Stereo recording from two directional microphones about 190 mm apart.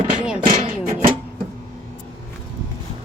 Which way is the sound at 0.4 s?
35° right (ahead or behind).